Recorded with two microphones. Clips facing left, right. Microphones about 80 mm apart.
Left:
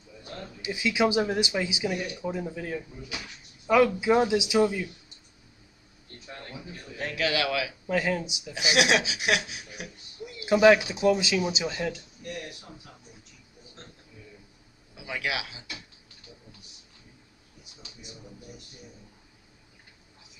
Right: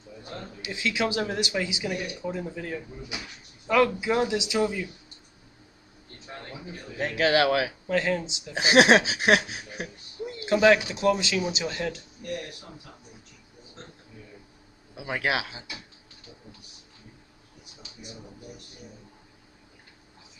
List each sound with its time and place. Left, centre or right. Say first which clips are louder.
0.2 s a sound: right 1 dB; right
0.7 s speech: left 3 dB; centre
7.0 s speech: right 6 dB; right
7.9 s speech: right 1 dB; centre
8.5 s speech: right 6 dB; right
10.4 s speech: left 1 dB; centre
15.0 s speech: right 4 dB; right